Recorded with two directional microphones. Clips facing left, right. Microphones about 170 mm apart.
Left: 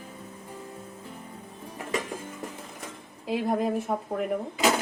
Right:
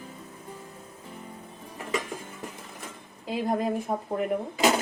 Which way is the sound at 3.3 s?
Centre (ahead or behind).